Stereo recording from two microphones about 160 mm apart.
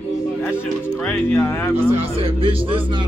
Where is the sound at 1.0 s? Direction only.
10° left (ahead or behind).